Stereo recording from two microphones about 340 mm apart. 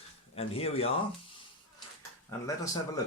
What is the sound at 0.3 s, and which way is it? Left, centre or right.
Speech, centre.